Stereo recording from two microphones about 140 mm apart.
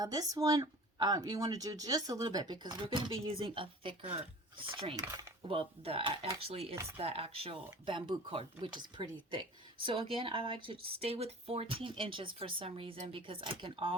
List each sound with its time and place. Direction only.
0.0 s speech: 25° right (ahead or behind)